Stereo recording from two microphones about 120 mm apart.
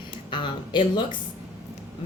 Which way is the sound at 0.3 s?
40° left (ahead or behind).